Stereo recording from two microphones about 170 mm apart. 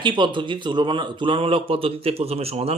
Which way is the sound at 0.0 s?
30° right (ahead or behind).